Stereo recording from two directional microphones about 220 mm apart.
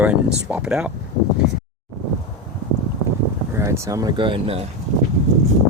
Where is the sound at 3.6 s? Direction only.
15° right (ahead or behind).